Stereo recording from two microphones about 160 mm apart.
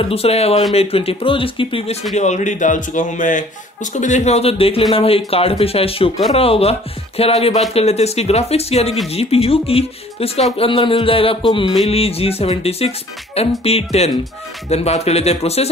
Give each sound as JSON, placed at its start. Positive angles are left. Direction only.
{"t": 0.0, "sound": "speech", "side_deg": 40}
{"t": 2.1, "sound": "a man's voice", "side_deg": 45}